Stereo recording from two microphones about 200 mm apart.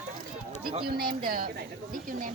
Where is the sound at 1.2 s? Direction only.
45° right (ahead or behind).